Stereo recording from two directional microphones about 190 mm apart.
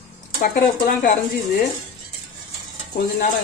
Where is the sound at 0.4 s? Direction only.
55° left (ahead or behind).